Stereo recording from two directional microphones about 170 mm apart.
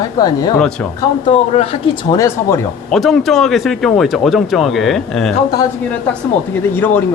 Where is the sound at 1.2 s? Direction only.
35° left (ahead or behind).